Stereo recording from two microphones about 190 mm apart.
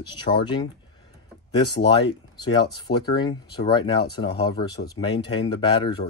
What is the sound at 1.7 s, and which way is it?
Speech, 60° left (ahead or behind).